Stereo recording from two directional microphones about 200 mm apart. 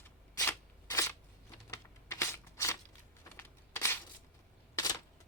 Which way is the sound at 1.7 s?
15° left (ahead or behind).